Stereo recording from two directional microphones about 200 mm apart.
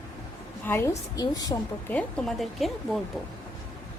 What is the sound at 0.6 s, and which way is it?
Speech, 10° left (ahead or behind).